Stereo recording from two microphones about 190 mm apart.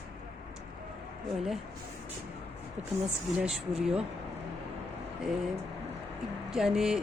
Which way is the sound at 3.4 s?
5° right (ahead or behind).